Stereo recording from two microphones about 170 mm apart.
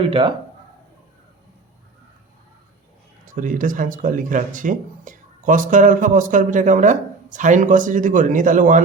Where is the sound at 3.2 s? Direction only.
50° right (ahead or behind).